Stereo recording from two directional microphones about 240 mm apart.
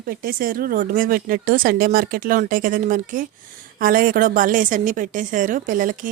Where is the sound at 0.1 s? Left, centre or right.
Right.